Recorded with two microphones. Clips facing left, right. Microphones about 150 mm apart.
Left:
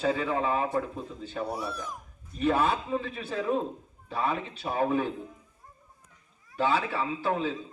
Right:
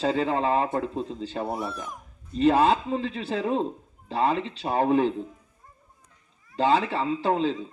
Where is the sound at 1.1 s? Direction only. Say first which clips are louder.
Right 4 dB; 90° right.